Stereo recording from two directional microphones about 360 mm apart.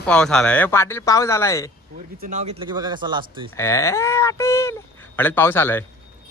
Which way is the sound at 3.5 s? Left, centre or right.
Centre.